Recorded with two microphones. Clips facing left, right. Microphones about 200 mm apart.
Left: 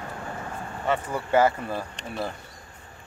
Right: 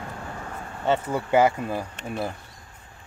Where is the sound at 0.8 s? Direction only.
25° right (ahead or behind).